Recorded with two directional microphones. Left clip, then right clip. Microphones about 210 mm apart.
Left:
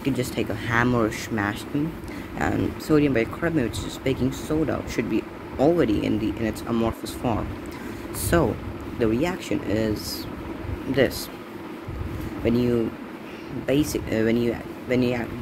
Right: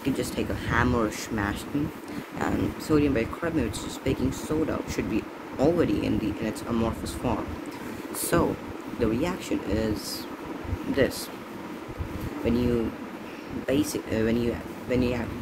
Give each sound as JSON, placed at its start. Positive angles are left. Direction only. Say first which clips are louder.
{"t": 0.0, "sound": "speech", "louder": "left 3 dB", "side_deg": 10}
{"t": 12.4, "sound": "speech", "louder": "left 4 dB", "side_deg": 10}
{"t": 13.7, "sound": "speech", "louder": "left 3 dB", "side_deg": 15}